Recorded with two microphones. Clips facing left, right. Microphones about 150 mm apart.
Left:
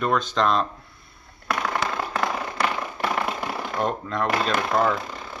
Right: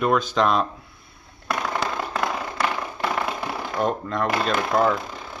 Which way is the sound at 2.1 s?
Centre (ahead or behind).